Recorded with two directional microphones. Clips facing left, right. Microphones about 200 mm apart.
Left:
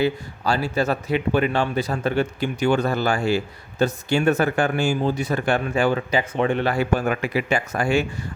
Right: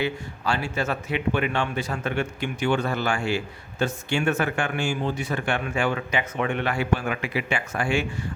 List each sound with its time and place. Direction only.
0.0 s a man's voice: 40° left (ahead or behind)